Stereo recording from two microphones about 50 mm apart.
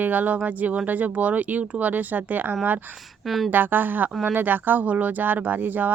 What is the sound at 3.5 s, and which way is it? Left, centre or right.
Speech, right.